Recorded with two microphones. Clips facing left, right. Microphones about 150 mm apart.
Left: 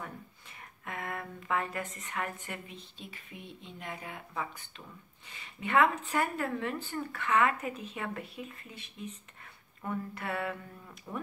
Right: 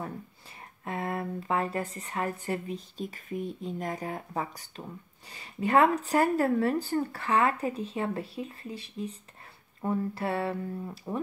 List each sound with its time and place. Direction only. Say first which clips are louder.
0.6 s speech: right 6 dB; 30° right (ahead or behind)